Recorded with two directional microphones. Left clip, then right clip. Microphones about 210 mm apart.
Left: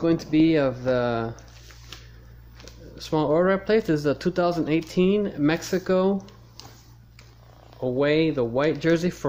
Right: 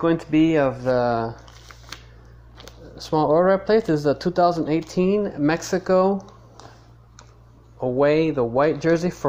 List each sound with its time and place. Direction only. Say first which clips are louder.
0.0 s speech: right 2 dB; 10° left (ahead or behind)
3.0 s speech: right 4 dB; centre (ahead or behind)
7.8 s speech: right 3 dB; 5° left (ahead or behind)